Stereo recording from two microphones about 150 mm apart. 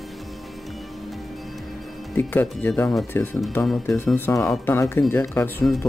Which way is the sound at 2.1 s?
15° left (ahead or behind).